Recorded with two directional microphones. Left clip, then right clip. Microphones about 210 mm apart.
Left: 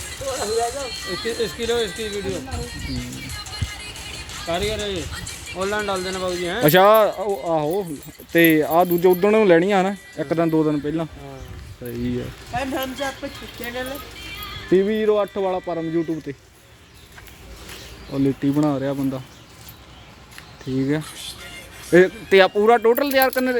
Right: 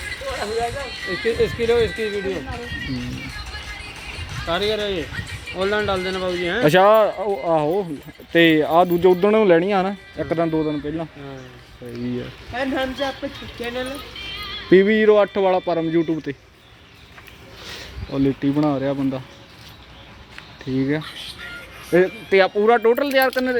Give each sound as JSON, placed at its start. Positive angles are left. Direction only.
{"t": 0.3, "sound": "speech", "side_deg": 25}
{"t": 1.1, "sound": "a man's voice", "side_deg": -45}
{"t": 4.4, "sound": "a man's voice", "side_deg": -40}
{"t": 6.6, "sound": "speech", "side_deg": 10}
{"t": 7.2, "sound": "speech", "side_deg": 0}
{"t": 12.5, "sound": "a man's voice", "side_deg": -45}
{"t": 14.7, "sound": "speech", "side_deg": -20}
{"t": 18.1, "sound": "speech", "side_deg": 5}
{"t": 20.7, "sound": "speech", "side_deg": 5}
{"t": 21.9, "sound": "speech", "side_deg": 25}